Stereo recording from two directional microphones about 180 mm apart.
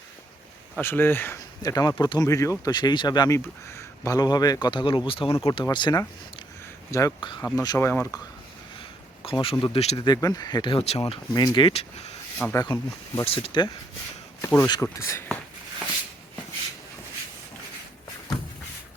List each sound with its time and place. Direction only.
0.8 s speech: 10° left (ahead or behind)
9.2 s speech: 30° left (ahead or behind)
10.1 s speech: 20° left (ahead or behind); by 12.1 s 35° left (ahead or behind)
12.5 s speech: 15° left (ahead or behind)
13.2 s speech: 30° left (ahead or behind)
14.4 s speech: 15° left (ahead or behind)